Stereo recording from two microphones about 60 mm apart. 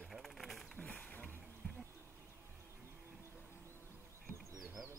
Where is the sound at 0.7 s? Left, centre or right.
Left.